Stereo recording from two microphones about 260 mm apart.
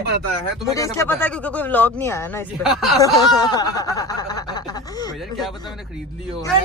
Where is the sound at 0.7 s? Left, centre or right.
Centre.